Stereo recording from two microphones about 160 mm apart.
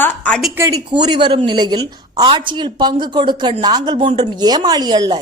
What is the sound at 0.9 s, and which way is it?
Speech, 30° right (ahead or behind).